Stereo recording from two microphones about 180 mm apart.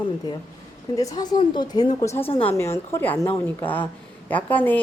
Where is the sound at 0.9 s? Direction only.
20° left (ahead or behind).